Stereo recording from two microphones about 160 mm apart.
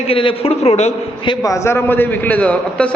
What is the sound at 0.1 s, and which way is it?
A man's voice, 35° left (ahead or behind).